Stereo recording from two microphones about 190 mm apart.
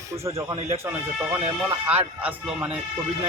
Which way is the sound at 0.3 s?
15° right (ahead or behind).